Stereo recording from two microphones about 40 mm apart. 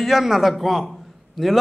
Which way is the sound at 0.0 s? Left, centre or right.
Centre.